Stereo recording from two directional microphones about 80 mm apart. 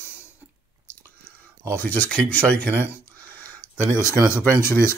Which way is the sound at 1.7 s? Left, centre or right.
Centre.